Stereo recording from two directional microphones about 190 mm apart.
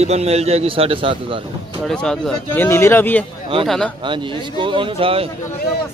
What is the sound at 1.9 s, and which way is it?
Speech, 5° left (ahead or behind).